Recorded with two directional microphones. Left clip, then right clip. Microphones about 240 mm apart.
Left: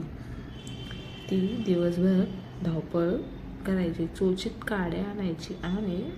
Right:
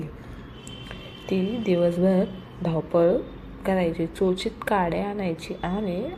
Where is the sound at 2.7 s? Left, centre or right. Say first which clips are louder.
Right 8 dB; centre.